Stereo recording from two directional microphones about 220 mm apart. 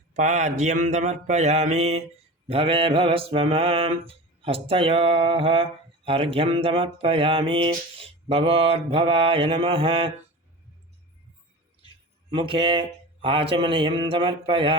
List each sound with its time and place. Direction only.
0.1 s mantra: 35° right (ahead or behind)
12.3 s mantra: 25° right (ahead or behind)